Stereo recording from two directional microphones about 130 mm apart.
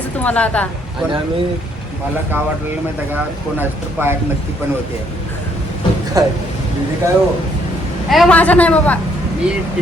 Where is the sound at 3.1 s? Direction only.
15° right (ahead or behind).